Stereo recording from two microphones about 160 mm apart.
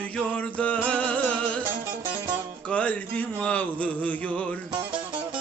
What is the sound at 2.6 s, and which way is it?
Mantra, 10° left (ahead or behind).